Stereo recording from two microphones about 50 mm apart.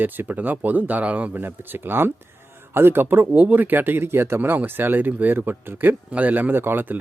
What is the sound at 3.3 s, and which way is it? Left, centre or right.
Speech, right.